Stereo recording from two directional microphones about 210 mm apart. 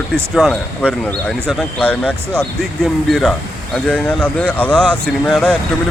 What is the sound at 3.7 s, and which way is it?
Speech, 5° left (ahead or behind).